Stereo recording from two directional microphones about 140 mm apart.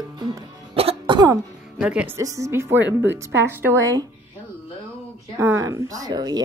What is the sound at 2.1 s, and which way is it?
Speech, 25° right (ahead or behind).